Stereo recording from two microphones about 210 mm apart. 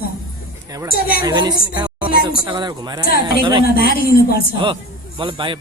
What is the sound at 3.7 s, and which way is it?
Speech, 45° left (ahead or behind).